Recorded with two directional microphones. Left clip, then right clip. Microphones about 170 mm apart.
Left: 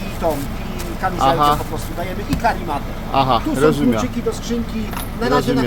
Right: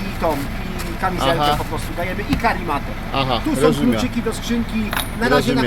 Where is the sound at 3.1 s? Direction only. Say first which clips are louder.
Left 3 dB; 15° left (ahead or behind).